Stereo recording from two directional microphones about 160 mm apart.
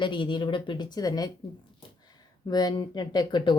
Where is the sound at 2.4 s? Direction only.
25° left (ahead or behind).